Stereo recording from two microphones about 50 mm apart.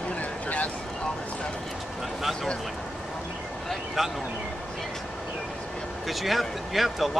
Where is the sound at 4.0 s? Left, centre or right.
Centre.